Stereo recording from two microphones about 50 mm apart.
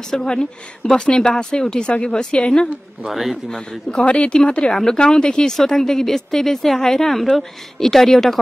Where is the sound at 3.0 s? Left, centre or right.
Centre.